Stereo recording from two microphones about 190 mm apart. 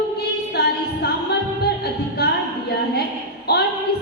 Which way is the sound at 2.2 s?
55° left (ahead or behind).